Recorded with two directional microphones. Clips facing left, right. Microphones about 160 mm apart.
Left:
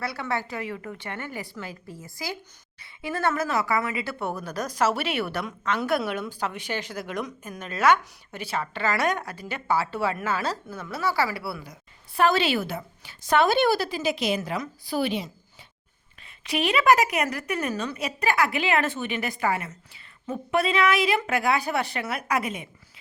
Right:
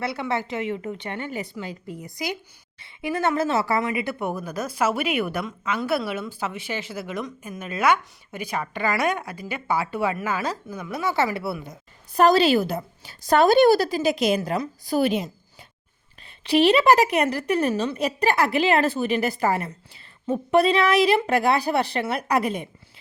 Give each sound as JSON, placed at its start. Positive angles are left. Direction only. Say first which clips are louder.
{"t": 0.0, "sound": "a woman's voice", "louder": "right 3 dB", "side_deg": -25}
{"t": 12.1, "sound": "a woman's voice", "louder": "right 5 dB", "side_deg": -40}
{"t": 16.4, "sound": "a woman's voice", "louder": "right 7 dB", "side_deg": -30}